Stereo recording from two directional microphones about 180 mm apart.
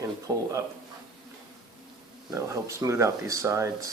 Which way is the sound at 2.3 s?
15° right (ahead or behind).